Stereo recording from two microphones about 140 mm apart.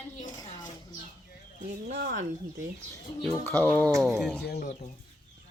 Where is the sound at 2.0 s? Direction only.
90° right.